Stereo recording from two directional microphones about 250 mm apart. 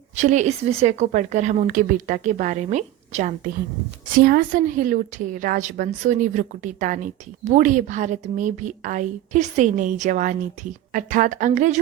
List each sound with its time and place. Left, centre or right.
0.2 s a woman's voice: right